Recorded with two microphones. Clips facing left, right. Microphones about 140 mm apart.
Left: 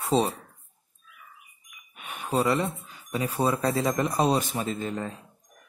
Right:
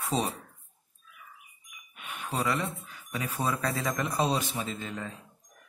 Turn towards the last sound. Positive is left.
turn(degrees=40)  # may be behind; listen again after turning